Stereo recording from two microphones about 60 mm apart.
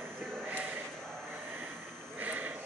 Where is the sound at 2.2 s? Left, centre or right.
Right.